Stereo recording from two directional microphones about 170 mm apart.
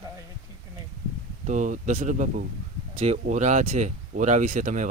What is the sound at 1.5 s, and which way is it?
Speech, 50° right (ahead or behind).